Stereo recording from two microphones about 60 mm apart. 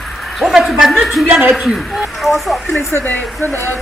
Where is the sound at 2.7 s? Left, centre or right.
Left.